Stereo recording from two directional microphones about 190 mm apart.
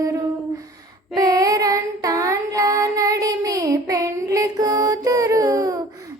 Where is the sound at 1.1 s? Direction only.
20° right (ahead or behind).